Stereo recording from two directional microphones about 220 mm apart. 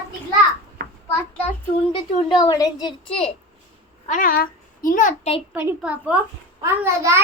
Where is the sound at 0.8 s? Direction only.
45° right (ahead or behind).